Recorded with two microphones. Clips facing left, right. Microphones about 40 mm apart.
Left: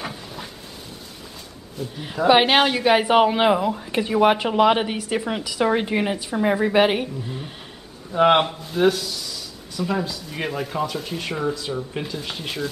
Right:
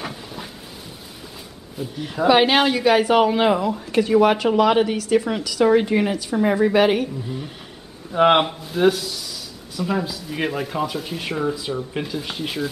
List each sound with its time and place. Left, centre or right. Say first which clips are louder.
0.0 s a sound: right 1 dB; centre
1.8 s speech: right 1 dB; centre
2.2 s a woman's voice: even; centre
8.1 s speech: right 1 dB; centre